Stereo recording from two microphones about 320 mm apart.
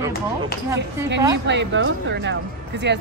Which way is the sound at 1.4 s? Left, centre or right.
Right.